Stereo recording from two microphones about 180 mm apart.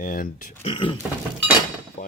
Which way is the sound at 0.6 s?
30° left (ahead or behind).